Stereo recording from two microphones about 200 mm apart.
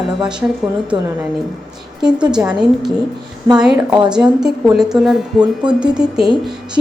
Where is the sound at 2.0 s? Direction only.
5° right (ahead or behind).